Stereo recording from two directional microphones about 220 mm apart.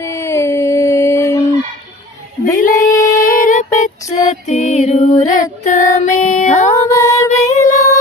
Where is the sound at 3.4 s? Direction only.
35° left (ahead or behind).